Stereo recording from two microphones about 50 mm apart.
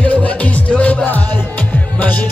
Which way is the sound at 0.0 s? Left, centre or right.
Left.